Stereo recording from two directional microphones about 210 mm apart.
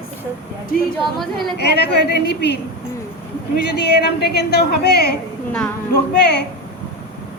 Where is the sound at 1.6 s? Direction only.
50° left (ahead or behind).